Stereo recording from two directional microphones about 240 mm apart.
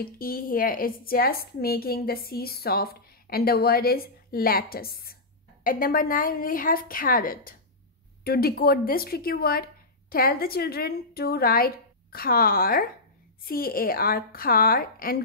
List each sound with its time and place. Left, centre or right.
0.0 s speech: left